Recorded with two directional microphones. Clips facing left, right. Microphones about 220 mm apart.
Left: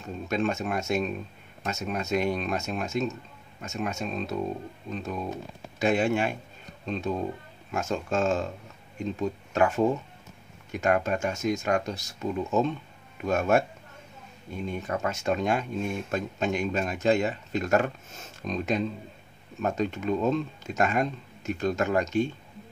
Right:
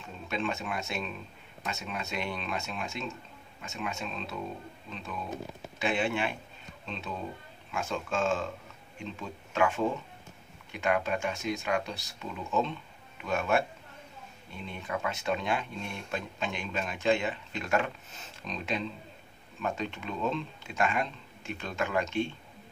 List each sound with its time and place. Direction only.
0.0 s speech: 45° left (ahead or behind)